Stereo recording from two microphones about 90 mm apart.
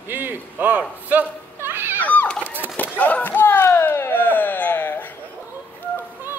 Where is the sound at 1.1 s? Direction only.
20° right (ahead or behind).